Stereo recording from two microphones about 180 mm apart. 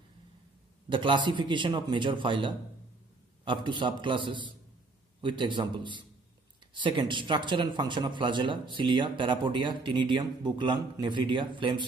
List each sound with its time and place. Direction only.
0.8 s a man's voice: 25° right (ahead or behind)